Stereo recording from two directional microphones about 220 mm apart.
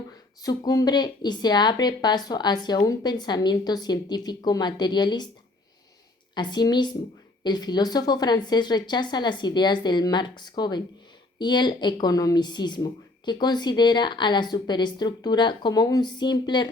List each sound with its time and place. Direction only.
0.4 s a woman's voice: 15° left (ahead or behind)
6.3 s a woman's voice: 20° left (ahead or behind)